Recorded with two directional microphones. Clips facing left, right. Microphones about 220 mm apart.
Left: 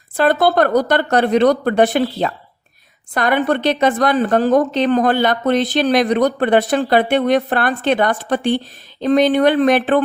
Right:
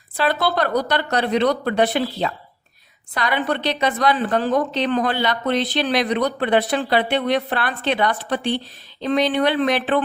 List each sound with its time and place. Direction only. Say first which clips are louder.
0.2 s a woman's voice: left 7 dB; 50° left (ahead or behind)